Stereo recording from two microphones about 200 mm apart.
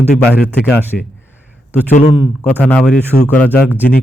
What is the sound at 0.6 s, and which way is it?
Speech, 10° left (ahead or behind).